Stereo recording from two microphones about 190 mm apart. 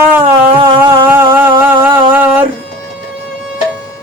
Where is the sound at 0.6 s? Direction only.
20° right (ahead or behind).